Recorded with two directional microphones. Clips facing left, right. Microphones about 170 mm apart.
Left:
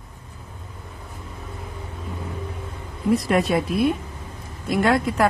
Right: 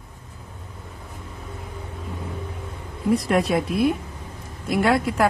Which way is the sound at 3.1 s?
Centre (ahead or behind).